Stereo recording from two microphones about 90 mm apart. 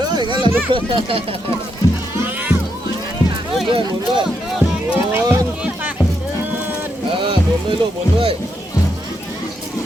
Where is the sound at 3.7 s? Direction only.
65° right (ahead or behind).